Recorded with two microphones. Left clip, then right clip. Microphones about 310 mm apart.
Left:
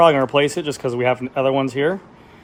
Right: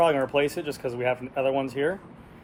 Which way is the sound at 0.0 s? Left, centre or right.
Left.